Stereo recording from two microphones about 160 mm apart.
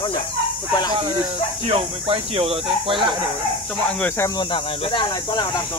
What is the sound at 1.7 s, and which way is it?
Speech, 35° right (ahead or behind).